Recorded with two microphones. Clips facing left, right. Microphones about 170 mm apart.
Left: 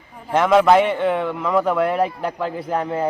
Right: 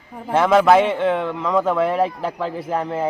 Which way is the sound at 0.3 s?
Centre (ahead or behind).